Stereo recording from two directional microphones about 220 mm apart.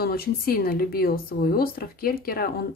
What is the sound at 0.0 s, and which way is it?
Speech, 45° left (ahead or behind).